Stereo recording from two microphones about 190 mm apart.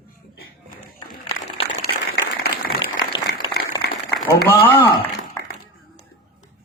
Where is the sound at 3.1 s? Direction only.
25° left (ahead or behind).